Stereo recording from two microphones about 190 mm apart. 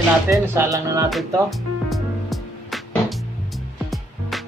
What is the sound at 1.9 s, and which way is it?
Music, centre (ahead or behind).